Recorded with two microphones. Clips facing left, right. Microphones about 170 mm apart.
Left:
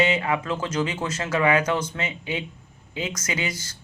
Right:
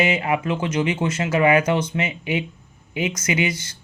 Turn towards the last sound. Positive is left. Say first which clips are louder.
# right 6 dB
turn(degrees=-20)  # may be behind; listen again after turning